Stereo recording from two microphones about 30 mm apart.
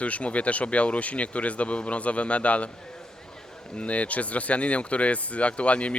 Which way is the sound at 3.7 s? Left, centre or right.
Left.